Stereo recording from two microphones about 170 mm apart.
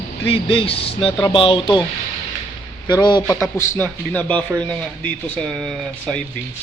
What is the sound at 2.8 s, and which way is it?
Speech, 25° left (ahead or behind).